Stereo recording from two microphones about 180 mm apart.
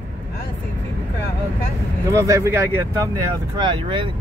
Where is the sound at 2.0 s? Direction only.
15° right (ahead or behind).